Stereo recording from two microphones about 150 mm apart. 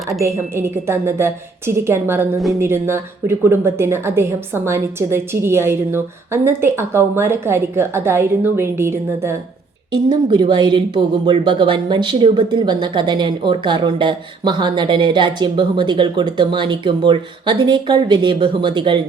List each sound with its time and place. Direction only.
0.2 s speech: 20° right (ahead or behind)
10.1 s speech: 30° right (ahead or behind)